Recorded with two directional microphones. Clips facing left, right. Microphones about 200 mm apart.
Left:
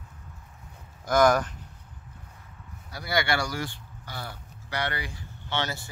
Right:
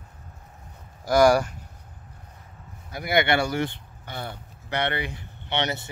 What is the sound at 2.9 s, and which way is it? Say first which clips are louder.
Speech: right 5 dB; 20° right (ahead or behind).